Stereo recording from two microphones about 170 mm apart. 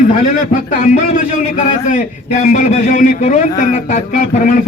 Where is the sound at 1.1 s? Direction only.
45° left (ahead or behind).